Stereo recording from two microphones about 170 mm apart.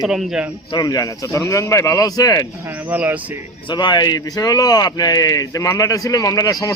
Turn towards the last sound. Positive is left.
turn(degrees=20)  # may be behind; listen again after turning